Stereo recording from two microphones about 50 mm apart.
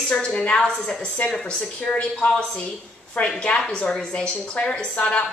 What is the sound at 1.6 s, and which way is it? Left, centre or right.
A woman's voice, left.